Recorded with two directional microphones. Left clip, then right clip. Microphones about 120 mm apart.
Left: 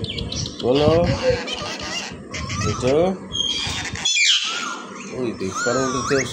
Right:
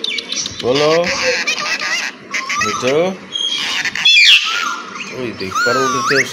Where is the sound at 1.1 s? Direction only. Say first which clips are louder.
Right 5 dB; 35° left (ahead or behind).